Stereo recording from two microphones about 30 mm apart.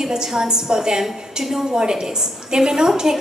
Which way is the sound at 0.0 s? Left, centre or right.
Right.